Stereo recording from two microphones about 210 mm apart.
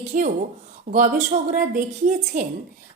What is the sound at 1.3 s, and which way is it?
A woman's voice, 40° right (ahead or behind).